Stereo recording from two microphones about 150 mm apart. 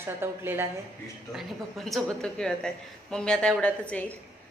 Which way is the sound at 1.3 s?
Centre (ahead or behind).